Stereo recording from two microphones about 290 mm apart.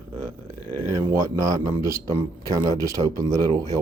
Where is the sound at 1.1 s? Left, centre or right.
Centre.